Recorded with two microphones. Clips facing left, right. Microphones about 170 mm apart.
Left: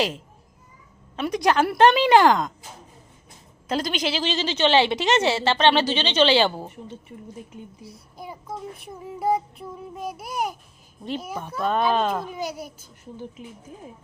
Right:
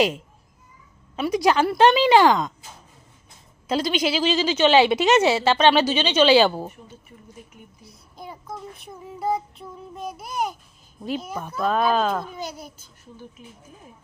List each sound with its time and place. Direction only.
1.1 s a woman's voice: 5° right (ahead or behind)
3.8 s speech: 45° left (ahead or behind)
4.0 s speech: 5° right (ahead or behind)
8.1 s a child's voice: 10° left (ahead or behind)
9.1 s child singing: 10° left (ahead or behind)
11.4 s a woman's voice: centre (ahead or behind)